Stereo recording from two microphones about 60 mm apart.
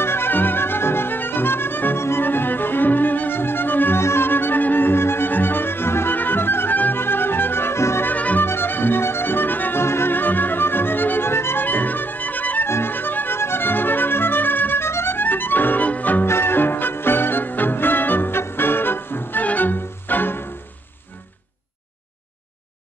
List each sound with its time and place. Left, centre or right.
0.0 s music: left
8.1 s music: left
12.6 s music: left
16.3 s music: left